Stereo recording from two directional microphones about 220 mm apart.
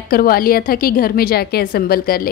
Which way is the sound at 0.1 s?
40° left (ahead or behind).